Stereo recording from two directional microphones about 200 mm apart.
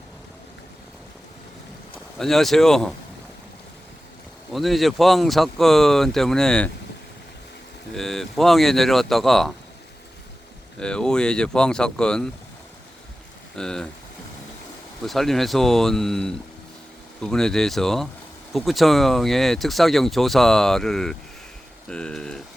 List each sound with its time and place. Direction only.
2.1 s speech: centre (ahead or behind)
4.5 s speech: centre (ahead or behind)
7.9 s speech: centre (ahead or behind)
10.8 s speech: 5° left (ahead or behind)
13.6 s speech: 5° left (ahead or behind)
15.0 s speech: centre (ahead or behind)